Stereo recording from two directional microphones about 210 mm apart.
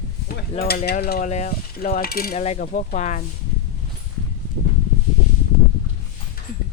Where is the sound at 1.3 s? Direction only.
35° left (ahead or behind).